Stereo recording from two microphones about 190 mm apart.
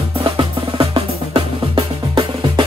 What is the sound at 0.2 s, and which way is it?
Drum, 25° right (ahead or behind).